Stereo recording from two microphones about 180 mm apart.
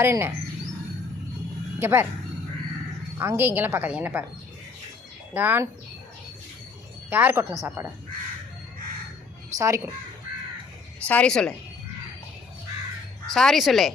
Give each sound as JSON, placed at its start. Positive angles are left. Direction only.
{"t": 0.0, "sound": "a woman's voice", "side_deg": -15}
{"t": 1.8, "sound": "a woman's voice", "side_deg": -15}
{"t": 3.2, "sound": "a woman's voice", "side_deg": -10}
{"t": 5.3, "sound": "a woman's voice", "side_deg": -10}
{"t": 7.1, "sound": "a woman's voice", "side_deg": -10}
{"t": 9.6, "sound": "a woman's voice", "side_deg": -15}
{"t": 11.1, "sound": "speech", "side_deg": 5}
{"t": 13.3, "sound": "speech", "side_deg": 0}